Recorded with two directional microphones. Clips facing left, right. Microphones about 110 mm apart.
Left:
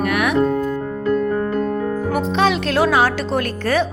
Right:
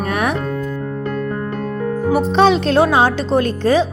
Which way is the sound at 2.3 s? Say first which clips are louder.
Right 5 dB; 30° right (ahead or behind).